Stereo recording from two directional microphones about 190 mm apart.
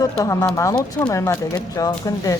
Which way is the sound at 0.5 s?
15° left (ahead or behind).